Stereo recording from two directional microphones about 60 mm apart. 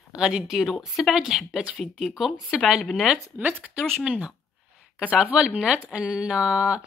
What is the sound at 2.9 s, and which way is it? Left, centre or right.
Speech, centre.